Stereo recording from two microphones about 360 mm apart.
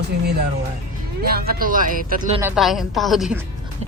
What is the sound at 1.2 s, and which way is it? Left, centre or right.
Speech, right.